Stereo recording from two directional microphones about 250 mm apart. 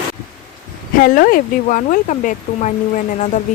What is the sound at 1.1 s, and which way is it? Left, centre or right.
Speech, left.